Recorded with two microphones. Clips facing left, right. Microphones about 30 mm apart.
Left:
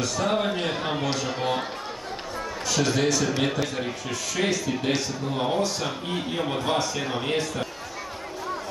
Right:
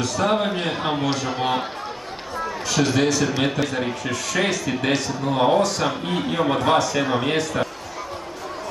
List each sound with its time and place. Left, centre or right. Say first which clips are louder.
0.2 s a man's voice: right 4 dB; right
1.4 s a man's voice: right 4 dB; right
2.8 s a man's voice: right 4 dB; centre
4.1 s a man's voice: right 2 dB; right
6.3 s a man's voice: right 7 dB; right